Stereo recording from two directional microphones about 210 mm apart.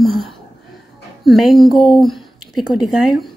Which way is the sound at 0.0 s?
Centre (ahead or behind).